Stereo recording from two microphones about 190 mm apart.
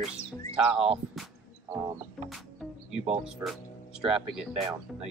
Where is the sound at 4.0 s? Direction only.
5° right (ahead or behind).